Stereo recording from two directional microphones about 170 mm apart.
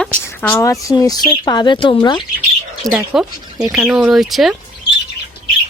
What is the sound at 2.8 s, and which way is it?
Speech, 5° right (ahead or behind).